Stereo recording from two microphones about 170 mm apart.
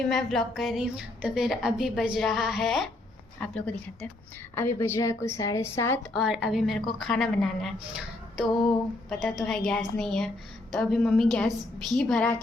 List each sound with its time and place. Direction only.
0.1 s a woman's voice: centre (ahead or behind)
6.1 s a woman's voice: 5° right (ahead or behind)